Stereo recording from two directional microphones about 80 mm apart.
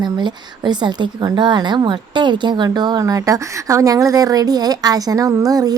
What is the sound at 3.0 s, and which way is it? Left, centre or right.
A woman's voice, right.